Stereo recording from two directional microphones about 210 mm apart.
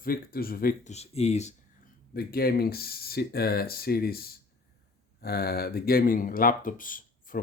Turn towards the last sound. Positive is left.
turn(degrees=40)  # may be behind; listen again after turning